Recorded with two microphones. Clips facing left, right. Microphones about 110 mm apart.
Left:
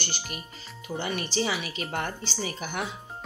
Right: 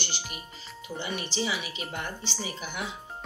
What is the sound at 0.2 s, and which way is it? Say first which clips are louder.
Music: left 2 dB; 5° right (ahead or behind).